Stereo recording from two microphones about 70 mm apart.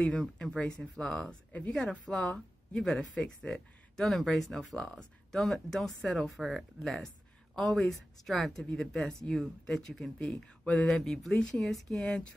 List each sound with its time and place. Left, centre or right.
0.0 s speech: centre
10.2 s speech: centre
10.9 s speech: centre